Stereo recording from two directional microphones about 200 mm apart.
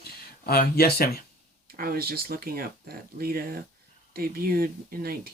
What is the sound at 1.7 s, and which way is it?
Speech, 50° right (ahead or behind).